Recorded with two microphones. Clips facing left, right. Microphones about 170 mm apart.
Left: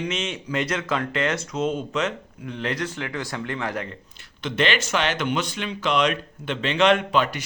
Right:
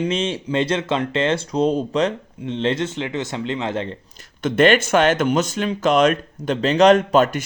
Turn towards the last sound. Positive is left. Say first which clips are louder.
# right 7 dB
turn(degrees=-45)  # may be behind; listen again after turning